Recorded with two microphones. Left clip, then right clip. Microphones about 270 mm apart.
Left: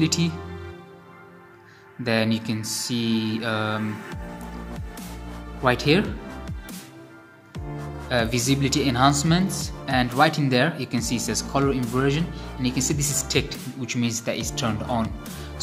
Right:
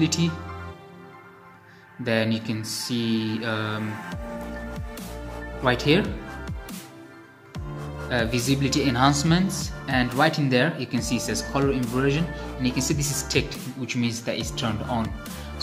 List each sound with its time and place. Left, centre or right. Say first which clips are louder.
0.0 s speech: left 1 dB; centre
2.0 s speech: left 1 dB; centre
5.6 s speech: left 1 dB; centre
8.1 s speech: left 2 dB; centre